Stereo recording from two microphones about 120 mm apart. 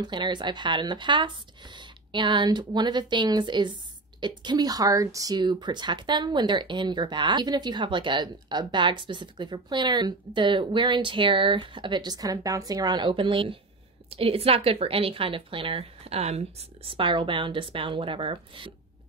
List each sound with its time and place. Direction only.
0.0 s a woman's voice: 40° right (ahead or behind)